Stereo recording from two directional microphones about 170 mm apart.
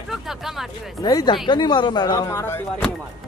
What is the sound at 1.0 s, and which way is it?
Speech, 25° left (ahead or behind).